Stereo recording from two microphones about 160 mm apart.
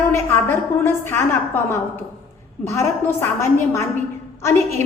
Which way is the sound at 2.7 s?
15° left (ahead or behind).